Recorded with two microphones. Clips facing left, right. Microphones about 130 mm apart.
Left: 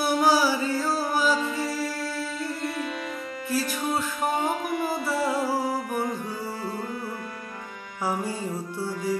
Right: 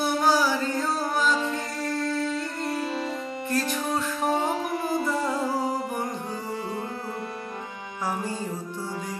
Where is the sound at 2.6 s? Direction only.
30° right (ahead or behind).